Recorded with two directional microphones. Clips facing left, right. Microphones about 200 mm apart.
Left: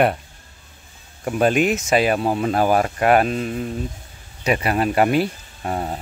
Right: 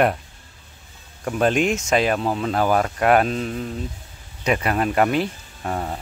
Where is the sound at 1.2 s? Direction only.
5° left (ahead or behind).